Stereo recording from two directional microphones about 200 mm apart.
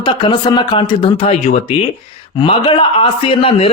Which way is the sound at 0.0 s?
25° left (ahead or behind).